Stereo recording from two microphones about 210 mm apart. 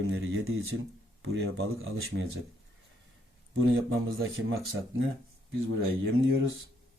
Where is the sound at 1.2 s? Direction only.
55° right (ahead or behind).